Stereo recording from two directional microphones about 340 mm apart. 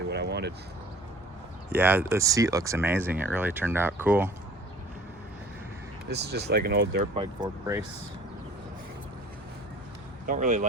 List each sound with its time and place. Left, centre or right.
0.1 s a sound: right
1.7 s speech: centre
6.1 s speech: right
7.2 s speech: centre
10.2 s speech: right